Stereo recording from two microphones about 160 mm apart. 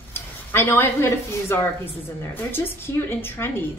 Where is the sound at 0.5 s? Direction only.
10° left (ahead or behind).